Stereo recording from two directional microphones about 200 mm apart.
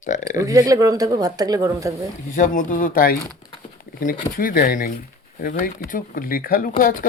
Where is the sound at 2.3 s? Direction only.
40° left (ahead or behind).